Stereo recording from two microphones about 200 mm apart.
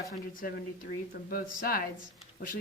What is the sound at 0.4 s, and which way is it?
A woman's voice, 45° left (ahead or behind).